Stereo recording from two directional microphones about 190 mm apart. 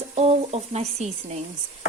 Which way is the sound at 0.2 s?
35° right (ahead or behind).